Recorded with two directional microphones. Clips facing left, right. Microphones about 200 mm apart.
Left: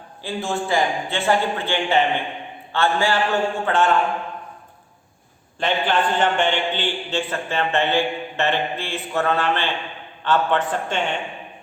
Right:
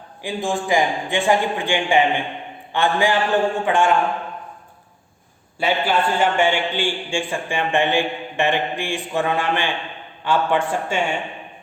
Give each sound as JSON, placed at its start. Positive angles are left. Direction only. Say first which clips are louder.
{"t": 0.2, "sound": "a man's voice", "louder": "right 2 dB", "side_deg": -15}
{"t": 5.5, "sound": "a man's voice", "louder": "right 1 dB", "side_deg": -10}